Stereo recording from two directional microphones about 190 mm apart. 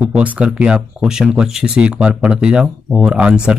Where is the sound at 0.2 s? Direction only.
5° right (ahead or behind).